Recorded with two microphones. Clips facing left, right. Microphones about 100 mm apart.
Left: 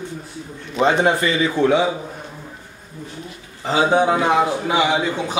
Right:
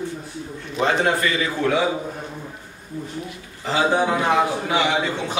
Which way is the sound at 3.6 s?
20° left (ahead or behind).